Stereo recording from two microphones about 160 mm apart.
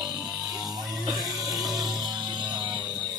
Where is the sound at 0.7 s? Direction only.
25° right (ahead or behind).